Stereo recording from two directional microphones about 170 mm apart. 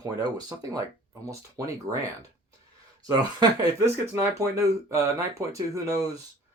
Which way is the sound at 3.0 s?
20° right (ahead or behind).